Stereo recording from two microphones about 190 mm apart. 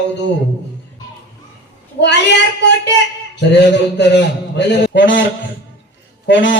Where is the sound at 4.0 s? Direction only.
65° left (ahead or behind).